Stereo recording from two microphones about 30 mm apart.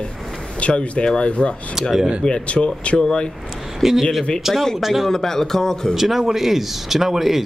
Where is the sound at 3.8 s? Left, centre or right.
Centre.